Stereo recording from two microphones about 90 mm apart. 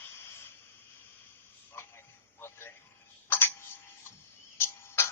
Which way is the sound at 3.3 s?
25° left (ahead or behind).